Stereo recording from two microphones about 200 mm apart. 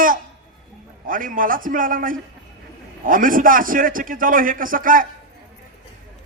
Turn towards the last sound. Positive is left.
turn(degrees=-45)  # may be behind; listen again after turning